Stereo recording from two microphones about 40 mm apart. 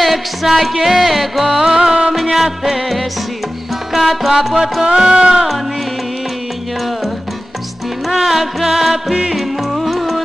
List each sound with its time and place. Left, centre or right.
0.0 s music: centre
2.1 s music: centre
4.8 s music: centre
8.1 s music: centre